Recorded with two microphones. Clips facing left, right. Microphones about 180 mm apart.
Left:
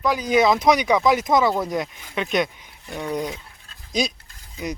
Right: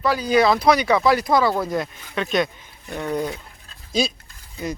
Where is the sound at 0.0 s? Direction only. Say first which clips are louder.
Right 1 dB; 15° left (ahead or behind).